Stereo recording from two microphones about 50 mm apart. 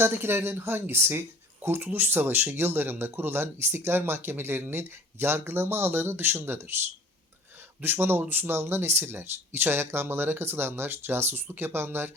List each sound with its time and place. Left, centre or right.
0.0 s speech: right
7.8 s speech: right